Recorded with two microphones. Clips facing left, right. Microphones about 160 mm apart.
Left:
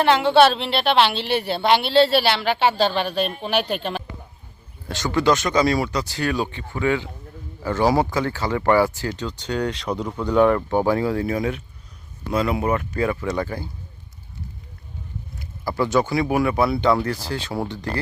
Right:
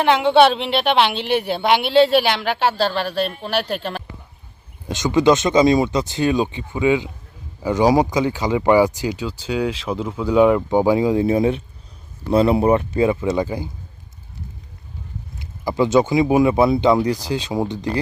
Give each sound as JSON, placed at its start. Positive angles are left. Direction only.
{"t": 0.0, "sound": "speech", "side_deg": -15}
{"t": 4.9, "sound": "speech", "side_deg": -20}
{"t": 15.4, "sound": "speech", "side_deg": -20}